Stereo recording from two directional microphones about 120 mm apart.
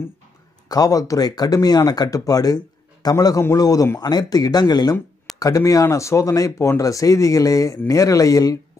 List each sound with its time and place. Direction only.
0.7 s speech: 30° left (ahead or behind)